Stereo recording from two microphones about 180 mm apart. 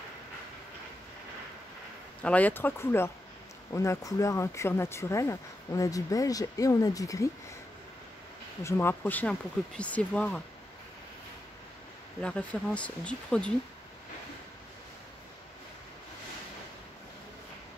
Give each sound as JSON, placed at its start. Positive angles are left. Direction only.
{"t": 2.2, "sound": "speech", "side_deg": 10}
{"t": 8.6, "sound": "speech", "side_deg": 10}
{"t": 12.2, "sound": "speech", "side_deg": 5}